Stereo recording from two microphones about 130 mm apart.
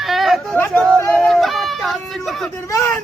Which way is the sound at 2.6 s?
25° left (ahead or behind).